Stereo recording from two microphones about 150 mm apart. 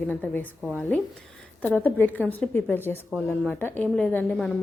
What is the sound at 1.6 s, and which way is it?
Speech, 10° left (ahead or behind).